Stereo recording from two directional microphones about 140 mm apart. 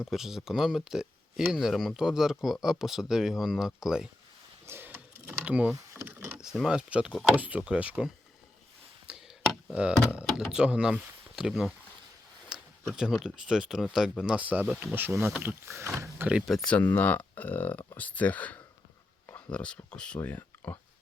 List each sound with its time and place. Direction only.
0.1 s speech: 5° right (ahead or behind)
4.6 s typing: 15° right (ahead or behind)
5.7 s a sound: 20° right (ahead or behind)
6.1 s vehicle: 15° right (ahead or behind)
6.4 s speech: 5° right (ahead or behind)
9.0 s chop: 5° right (ahead or behind)
10.2 s speech: 5° right (ahead or behind)
16.5 s speech: 10° left (ahead or behind)